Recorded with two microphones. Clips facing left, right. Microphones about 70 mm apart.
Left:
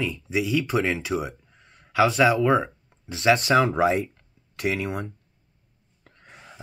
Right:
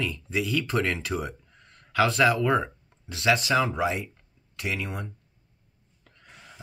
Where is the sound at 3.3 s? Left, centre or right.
Left.